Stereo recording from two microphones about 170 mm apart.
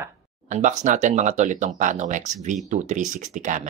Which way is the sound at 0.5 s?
45° right (ahead or behind).